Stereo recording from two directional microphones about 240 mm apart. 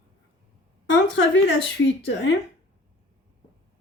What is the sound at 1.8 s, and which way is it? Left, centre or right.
Speech, left.